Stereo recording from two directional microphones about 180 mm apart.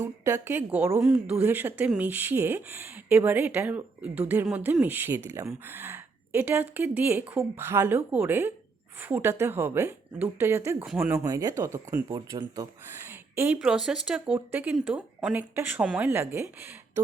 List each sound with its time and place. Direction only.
0.0 s speech: 15° right (ahead or behind)
11.2 s speech: 15° right (ahead or behind)
13.1 s speech: 10° right (ahead or behind)